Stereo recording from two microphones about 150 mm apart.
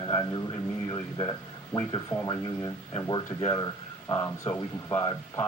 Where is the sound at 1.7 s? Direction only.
25° left (ahead or behind).